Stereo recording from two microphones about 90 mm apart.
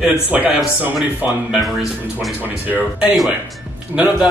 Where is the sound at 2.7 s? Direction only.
15° right (ahead or behind).